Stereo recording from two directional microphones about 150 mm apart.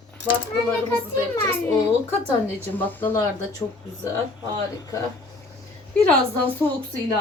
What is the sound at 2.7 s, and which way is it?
Speech, 10° left (ahead or behind).